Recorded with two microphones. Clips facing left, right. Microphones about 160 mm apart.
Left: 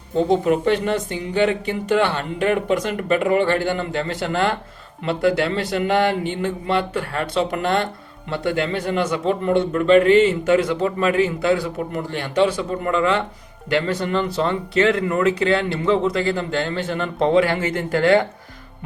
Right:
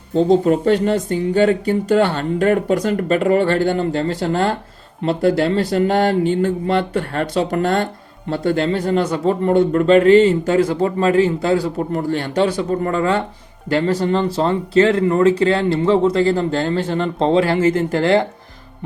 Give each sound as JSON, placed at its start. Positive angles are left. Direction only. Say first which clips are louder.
{"t": 0.4, "sound": "a man's voice", "louder": "right 3 dB", "side_deg": -35}